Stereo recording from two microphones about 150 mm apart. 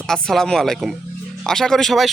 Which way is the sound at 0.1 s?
5° left (ahead or behind).